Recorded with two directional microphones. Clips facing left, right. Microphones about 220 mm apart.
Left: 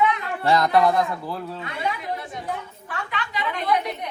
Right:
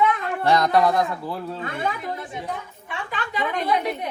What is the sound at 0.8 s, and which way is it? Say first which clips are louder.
Speech: even; centre (ahead or behind).